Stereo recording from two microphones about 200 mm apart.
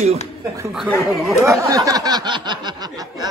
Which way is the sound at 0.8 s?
5° left (ahead or behind).